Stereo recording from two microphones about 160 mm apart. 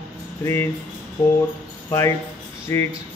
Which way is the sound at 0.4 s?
15° left (ahead or behind).